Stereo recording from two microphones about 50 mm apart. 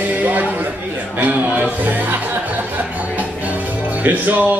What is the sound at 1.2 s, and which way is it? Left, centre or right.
Speech, right.